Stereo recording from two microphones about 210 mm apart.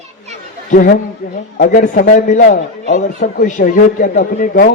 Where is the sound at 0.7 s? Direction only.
40° left (ahead or behind).